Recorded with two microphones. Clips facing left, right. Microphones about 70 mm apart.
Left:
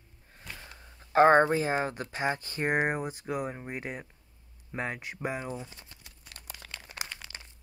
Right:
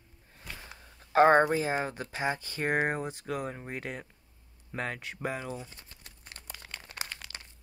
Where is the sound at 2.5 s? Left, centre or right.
Centre.